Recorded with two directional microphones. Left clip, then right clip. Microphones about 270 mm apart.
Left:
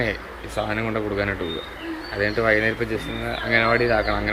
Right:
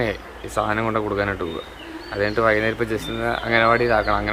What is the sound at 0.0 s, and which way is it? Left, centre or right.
Speech, centre.